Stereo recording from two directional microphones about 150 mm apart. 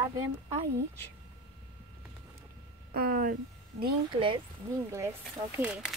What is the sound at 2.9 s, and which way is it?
Speech, 75° right (ahead or behind).